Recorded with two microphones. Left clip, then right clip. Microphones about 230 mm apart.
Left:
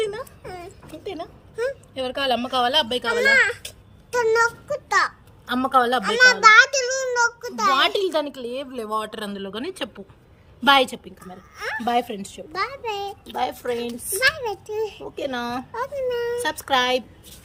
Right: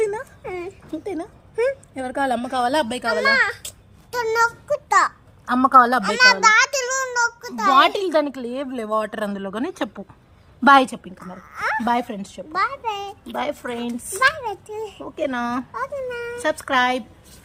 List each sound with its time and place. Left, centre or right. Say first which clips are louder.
0.4 s a sound: right 6 dB; centre
1.0 s a woman's voice: even; right
6.0 s a child's voice: even; centre
6.7 s a sound: even; centre
7.8 s a woman's voice: right 4 dB; centre
14.2 s a child's voice: right 2 dB; centre
15.1 s a woman's voice: right 8 dB; centre
15.7 s a child's voice: left 2 dB; centre
16.4 s a woman's voice: right 5 dB; centre